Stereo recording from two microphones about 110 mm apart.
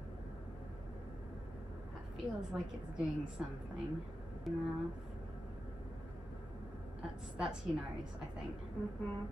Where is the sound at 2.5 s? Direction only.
5° right (ahead or behind).